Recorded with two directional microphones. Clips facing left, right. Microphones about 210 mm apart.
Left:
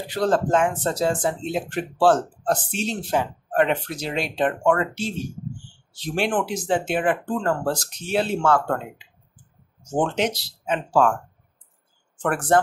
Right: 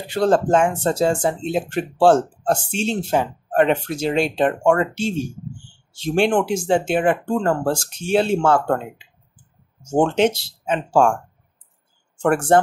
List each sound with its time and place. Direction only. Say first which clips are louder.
0.1 s speech: right 4 dB; 25° right (ahead or behind)
12.2 s speech: right 5 dB; 25° right (ahead or behind)